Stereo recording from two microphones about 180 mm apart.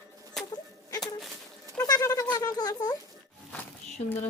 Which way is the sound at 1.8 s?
20° left (ahead or behind).